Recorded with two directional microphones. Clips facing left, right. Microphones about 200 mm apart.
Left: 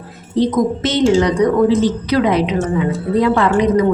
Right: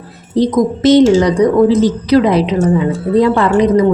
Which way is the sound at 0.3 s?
35° right (ahead or behind).